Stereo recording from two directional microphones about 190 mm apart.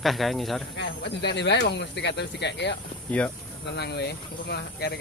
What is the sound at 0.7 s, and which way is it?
Speech, 65° left (ahead or behind).